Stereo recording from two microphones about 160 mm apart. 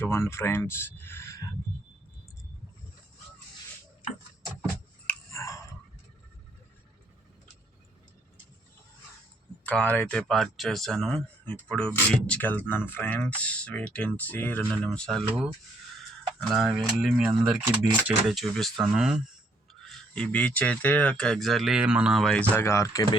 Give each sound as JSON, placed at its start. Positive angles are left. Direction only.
{"t": 0.0, "sound": "speech", "side_deg": 15}
{"t": 5.0, "sound": "a sound", "side_deg": 20}
{"t": 9.6, "sound": "speech", "side_deg": 10}
{"t": 16.5, "sound": "speech", "side_deg": 0}
{"t": 19.8, "sound": "speech", "side_deg": 5}